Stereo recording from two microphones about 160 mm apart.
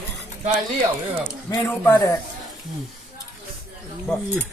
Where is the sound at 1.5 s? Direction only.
20° left (ahead or behind).